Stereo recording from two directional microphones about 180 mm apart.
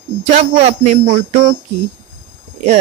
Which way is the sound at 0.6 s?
40° right (ahead or behind).